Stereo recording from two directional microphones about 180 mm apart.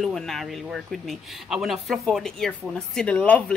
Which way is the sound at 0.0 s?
Centre (ahead or behind).